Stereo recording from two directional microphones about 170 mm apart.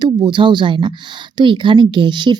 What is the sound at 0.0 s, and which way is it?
Speech, 25° right (ahead or behind).